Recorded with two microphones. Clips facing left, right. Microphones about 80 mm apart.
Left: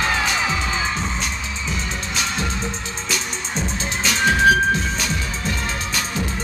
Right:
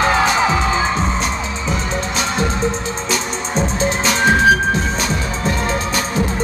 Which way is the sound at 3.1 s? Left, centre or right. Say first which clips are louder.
Right 5 dB; right.